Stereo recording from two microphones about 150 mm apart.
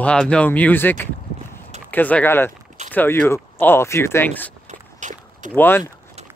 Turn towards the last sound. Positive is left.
turn(degrees=-45)  # may be behind; listen again after turning